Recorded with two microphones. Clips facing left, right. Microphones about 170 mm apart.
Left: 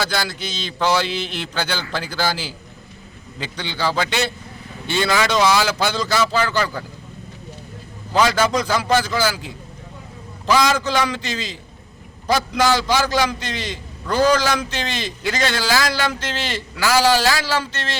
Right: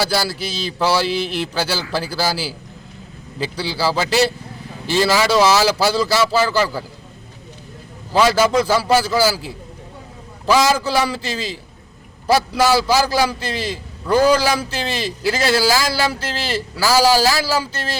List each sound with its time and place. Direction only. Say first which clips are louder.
0.0 s a man's voice: right 4 dB; 5° right (ahead or behind)
0.3 s a sound: right 3 dB; 5° right (ahead or behind)
0.9 s a man's voice: right 3 dB; 5° right (ahead or behind)
4.9 s a sound: right 3 dB; 5° right (ahead or behind)
5.8 s a man's voice: right 3 dB; 5° right (ahead or behind)
8.6 s a man's voice: right 3 dB; 5° right (ahead or behind)
10.4 s a man's voice: right 2 dB; 5° right (ahead or behind)
12.5 s a man's voice: right 1 dB; 5° right (ahead or behind)
16.3 s a man's voice: right 3 dB; 35° right (ahead or behind)
16.7 s a man's voice: right 2 dB; 10° right (ahead or behind)